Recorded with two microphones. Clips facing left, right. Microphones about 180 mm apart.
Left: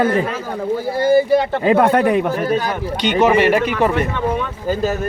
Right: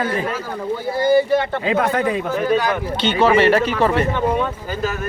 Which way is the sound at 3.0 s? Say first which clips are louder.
Left 1 dB; 15° left (ahead or behind).